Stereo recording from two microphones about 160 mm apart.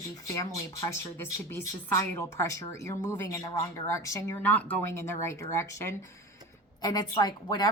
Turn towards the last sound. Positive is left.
turn(degrees=25)  # may be behind; listen again after turning